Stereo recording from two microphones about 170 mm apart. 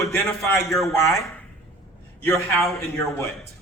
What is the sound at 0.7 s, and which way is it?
Speech, centre (ahead or behind).